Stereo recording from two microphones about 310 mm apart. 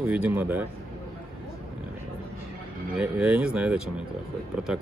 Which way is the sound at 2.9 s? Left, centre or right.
Centre.